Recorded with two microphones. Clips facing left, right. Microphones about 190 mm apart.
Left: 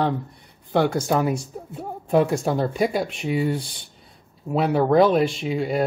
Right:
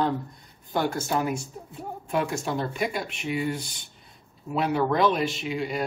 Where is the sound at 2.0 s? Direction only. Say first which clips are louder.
Left 8 dB; 35° left (ahead or behind).